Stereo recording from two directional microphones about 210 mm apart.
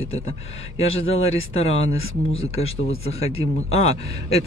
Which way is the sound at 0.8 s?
70° left (ahead or behind).